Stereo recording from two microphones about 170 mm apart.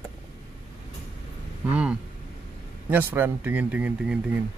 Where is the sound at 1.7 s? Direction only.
5° right (ahead or behind).